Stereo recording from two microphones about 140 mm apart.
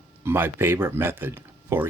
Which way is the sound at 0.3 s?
15° right (ahead or behind).